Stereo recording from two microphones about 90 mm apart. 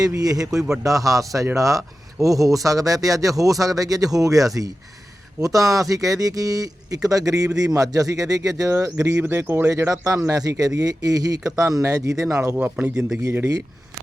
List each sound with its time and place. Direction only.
0.2 s a man's voice: 45° right (ahead or behind)
12.5 s speech: 20° right (ahead or behind)